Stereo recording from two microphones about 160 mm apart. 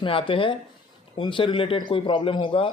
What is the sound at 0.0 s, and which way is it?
A man's voice, 35° left (ahead or behind).